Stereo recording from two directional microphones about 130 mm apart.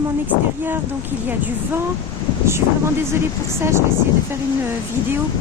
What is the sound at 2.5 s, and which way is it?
Speech, 20° right (ahead or behind).